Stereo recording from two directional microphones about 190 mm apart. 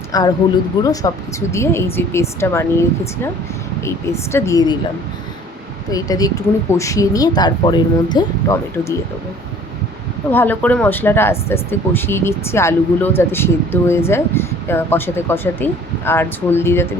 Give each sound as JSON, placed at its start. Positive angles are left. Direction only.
{"t": 0.1, "sound": "a woman's voice", "side_deg": 20}
{"t": 5.9, "sound": "speech", "side_deg": 20}
{"t": 10.3, "sound": "speech", "side_deg": 10}